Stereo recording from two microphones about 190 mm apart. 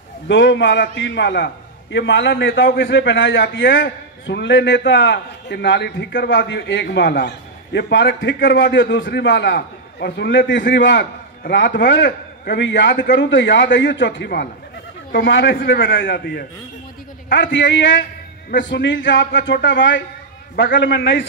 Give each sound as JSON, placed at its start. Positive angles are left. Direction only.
{"t": 0.3, "sound": "a man's voice", "side_deg": 70}